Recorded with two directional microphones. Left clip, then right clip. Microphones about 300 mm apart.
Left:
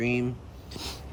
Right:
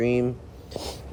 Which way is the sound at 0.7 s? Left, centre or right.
Centre.